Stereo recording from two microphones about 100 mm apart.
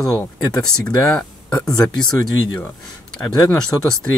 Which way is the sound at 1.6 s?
5° left (ahead or behind).